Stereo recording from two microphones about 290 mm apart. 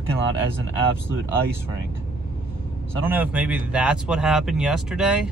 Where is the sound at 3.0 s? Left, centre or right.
Centre.